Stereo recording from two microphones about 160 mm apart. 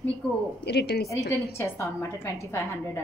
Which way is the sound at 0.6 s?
90° left.